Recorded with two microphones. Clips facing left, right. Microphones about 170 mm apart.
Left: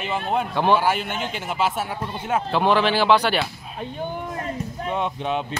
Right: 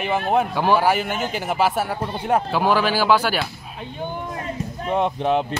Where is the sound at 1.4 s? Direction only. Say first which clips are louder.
Right 3 dB; 40° right (ahead or behind).